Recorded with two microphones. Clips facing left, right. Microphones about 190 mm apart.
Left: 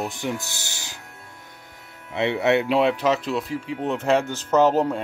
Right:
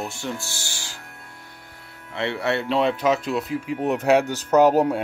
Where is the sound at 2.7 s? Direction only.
5° left (ahead or behind).